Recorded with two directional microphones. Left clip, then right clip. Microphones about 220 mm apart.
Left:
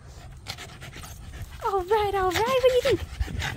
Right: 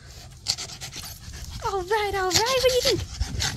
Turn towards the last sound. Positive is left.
turn(degrees=5)  # may be behind; listen again after turning